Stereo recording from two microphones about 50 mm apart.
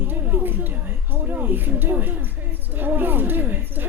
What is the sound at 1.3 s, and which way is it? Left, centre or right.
Speech, right.